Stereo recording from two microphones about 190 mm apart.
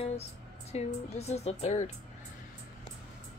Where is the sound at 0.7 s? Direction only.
35° left (ahead or behind).